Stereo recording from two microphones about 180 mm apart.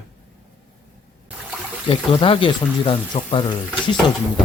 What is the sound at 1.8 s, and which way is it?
Speech, 30° left (ahead or behind).